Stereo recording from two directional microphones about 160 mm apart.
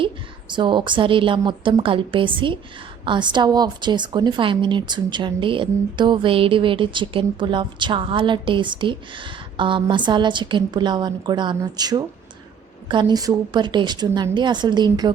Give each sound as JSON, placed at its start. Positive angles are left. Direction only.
{"t": 0.0, "sound": "a woman's voice", "side_deg": -30}